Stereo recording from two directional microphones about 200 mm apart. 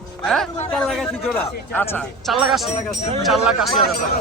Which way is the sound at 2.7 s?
30° left (ahead or behind).